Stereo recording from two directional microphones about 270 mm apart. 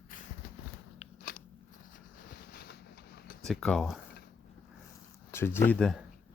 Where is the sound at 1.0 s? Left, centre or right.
Left.